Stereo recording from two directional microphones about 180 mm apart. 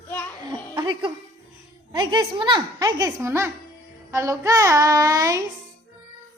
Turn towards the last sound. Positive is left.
turn(degrees=-20)  # may be behind; listen again after turning